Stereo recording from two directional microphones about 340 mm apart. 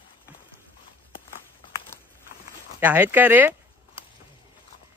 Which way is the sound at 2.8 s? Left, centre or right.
Centre.